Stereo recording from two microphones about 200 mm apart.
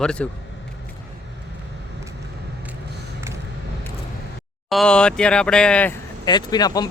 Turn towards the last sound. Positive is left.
turn(degrees=20)  # may be behind; listen again after turning